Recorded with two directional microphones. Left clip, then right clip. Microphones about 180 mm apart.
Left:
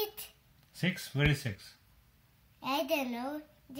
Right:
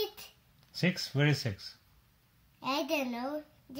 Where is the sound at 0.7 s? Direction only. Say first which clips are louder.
Right 2 dB; 30° right (ahead or behind).